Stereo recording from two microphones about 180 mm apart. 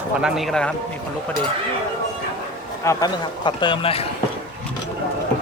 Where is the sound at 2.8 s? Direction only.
20° left (ahead or behind).